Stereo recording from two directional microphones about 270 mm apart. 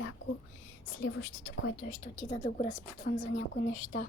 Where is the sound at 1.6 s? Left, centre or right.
Left.